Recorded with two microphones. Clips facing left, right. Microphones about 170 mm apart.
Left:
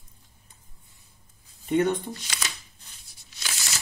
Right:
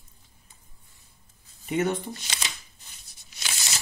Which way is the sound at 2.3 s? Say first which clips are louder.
Left 1 dB; 20° right (ahead or behind).